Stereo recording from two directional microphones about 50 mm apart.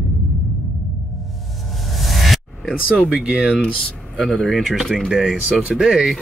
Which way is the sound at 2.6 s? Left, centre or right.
Centre.